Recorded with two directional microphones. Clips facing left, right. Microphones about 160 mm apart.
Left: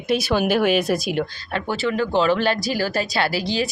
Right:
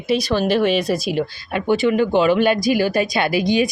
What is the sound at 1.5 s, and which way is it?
Speech, 15° right (ahead or behind).